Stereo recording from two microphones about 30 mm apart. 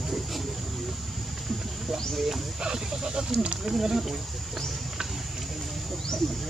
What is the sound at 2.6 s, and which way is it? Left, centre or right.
Speech, right.